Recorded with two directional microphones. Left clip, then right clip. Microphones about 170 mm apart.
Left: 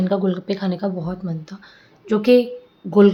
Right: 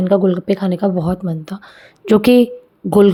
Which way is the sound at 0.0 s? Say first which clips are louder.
Right 7 dB; 35° right (ahead or behind).